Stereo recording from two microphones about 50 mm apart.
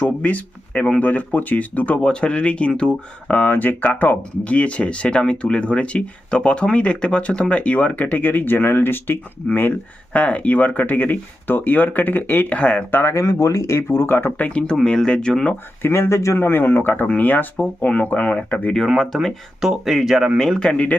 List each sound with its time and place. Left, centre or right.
0.0 s speech: left
2.0 s speech: centre; by 12.5 s left
12.5 s speech: left
12.9 s speech: left
13.1 s speech: left
14.3 s speech: left
14.8 s speech: centre
15.9 s speech: left
16.4 s speech: left
18.9 s speech: centre
20.6 s speech: centre